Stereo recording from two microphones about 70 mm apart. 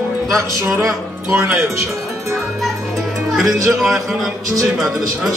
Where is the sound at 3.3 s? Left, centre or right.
Centre.